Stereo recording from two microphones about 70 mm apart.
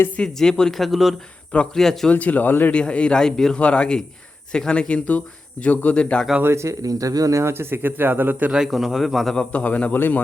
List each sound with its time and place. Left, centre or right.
0.2 s speech: centre
2.0 s speech: left
2.7 s speech: centre
6.4 s speech: right
6.8 s speech: right
8.4 s speech: centre; by 10.2 s left